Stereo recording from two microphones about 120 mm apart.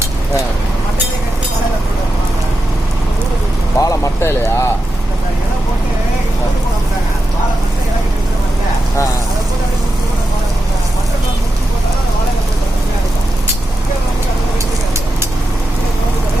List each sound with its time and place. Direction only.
3.8 s speech: 25° left (ahead or behind)